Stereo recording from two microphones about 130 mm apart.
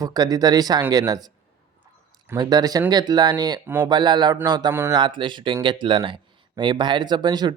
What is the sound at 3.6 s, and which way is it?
Speech, 15° right (ahead or behind).